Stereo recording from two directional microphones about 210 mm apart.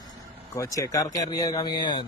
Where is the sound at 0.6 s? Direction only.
15° left (ahead or behind).